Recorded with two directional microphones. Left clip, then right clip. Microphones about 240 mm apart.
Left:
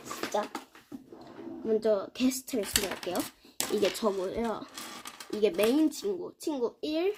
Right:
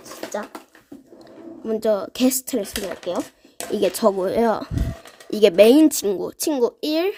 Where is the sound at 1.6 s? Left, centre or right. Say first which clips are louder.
Right 6 dB; right.